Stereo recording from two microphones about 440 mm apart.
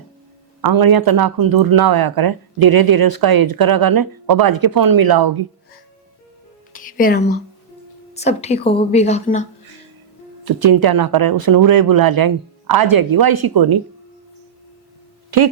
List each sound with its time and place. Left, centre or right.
0.6 s speech: right
6.7 s music: centre
8.1 s a woman's voice: centre
10.4 s speech: right